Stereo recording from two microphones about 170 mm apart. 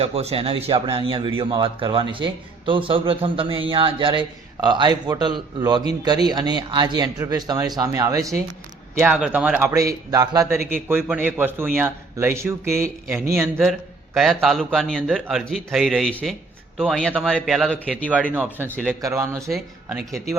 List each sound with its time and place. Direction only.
0.0 s speech: 35° right (ahead or behind); by 8.4 s 20° right (ahead or behind)
9.0 s a man's voice: 5° right (ahead or behind)
13.6 s a man's voice: centre (ahead or behind)
18.3 s a man's voice: 10° right (ahead or behind)
19.5 s speech: centre (ahead or behind)